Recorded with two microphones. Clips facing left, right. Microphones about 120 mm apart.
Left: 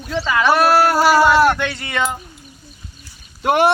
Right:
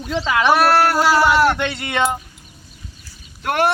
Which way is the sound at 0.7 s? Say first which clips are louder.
Left 2 dB; 5° left (ahead or behind).